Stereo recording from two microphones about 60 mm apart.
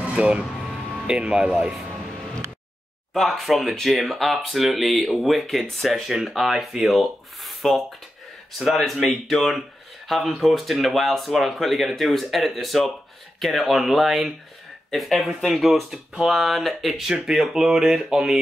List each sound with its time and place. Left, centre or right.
0.1 s speech: centre
3.2 s speech: centre